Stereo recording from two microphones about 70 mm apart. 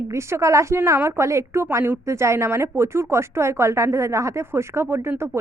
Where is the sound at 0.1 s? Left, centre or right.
Right.